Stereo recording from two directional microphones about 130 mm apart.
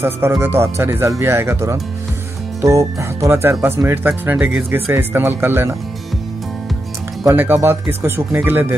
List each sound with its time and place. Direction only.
0.0 s speech: 20° right (ahead or behind)
7.2 s speech: 20° right (ahead or behind)